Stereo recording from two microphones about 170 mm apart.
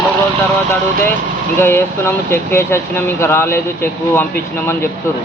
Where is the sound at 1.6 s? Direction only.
15° left (ahead or behind).